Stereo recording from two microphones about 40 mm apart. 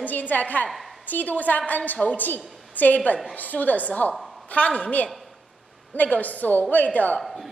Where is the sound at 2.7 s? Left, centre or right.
Left.